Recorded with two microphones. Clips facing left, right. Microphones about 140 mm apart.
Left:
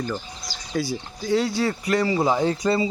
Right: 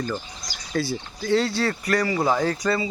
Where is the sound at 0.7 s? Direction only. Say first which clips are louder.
Even; 15° left (ahead or behind).